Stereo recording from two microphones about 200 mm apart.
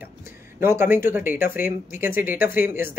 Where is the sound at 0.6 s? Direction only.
10° right (ahead or behind).